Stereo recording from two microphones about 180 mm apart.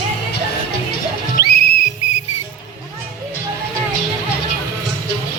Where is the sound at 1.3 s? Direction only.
55° left (ahead or behind).